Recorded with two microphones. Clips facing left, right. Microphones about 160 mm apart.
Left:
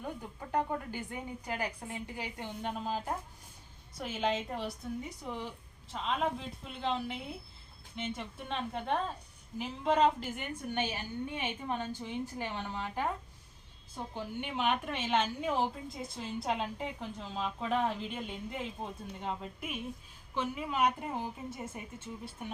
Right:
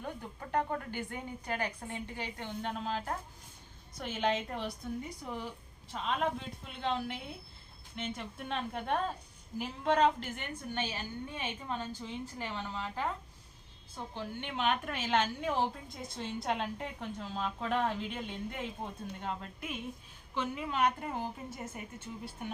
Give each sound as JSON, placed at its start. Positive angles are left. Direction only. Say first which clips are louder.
{"t": 0.0, "sound": "a woman's voice", "louder": "left 1 dB", "side_deg": 10}
{"t": 10.8, "sound": "a woman's voice", "louder": "left 3 dB", "side_deg": 15}
{"t": 14.1, "sound": "a woman's voice", "louder": "left 1 dB", "side_deg": 10}